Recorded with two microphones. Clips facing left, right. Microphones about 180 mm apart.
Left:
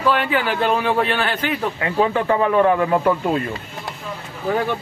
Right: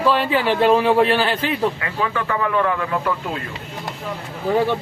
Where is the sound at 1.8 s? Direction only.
30° left (ahead or behind).